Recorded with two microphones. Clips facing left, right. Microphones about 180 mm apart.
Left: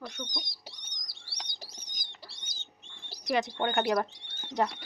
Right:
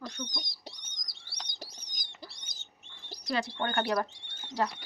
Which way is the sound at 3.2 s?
20° left (ahead or behind).